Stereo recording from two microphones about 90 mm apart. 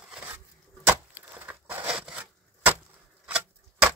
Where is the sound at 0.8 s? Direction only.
25° right (ahead or behind).